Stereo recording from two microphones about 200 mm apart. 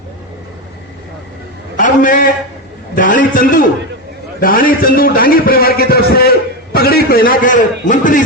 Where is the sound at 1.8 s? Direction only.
40° left (ahead or behind).